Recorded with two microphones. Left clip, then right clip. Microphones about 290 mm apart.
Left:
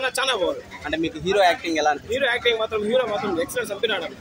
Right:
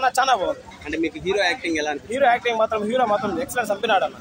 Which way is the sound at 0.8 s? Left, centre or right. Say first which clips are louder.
Even; centre.